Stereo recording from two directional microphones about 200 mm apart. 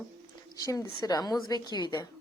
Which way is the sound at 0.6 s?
20° left (ahead or behind).